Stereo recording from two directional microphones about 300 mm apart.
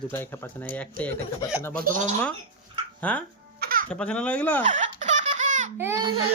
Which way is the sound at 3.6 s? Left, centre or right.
Right.